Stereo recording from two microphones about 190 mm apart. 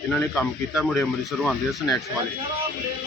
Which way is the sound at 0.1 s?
Centre (ahead or behind).